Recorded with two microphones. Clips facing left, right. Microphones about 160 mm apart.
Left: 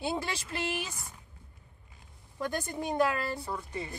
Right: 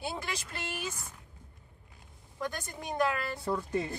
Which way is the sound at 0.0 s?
25° left (ahead or behind).